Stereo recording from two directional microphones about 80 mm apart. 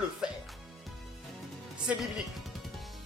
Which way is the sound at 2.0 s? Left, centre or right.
Centre.